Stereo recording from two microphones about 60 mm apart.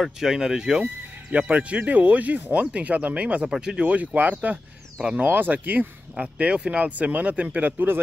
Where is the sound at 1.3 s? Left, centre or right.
Centre.